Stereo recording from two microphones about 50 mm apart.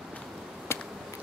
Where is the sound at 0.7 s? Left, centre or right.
Left.